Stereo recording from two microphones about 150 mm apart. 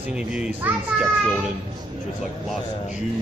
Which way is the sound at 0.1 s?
5° right (ahead or behind).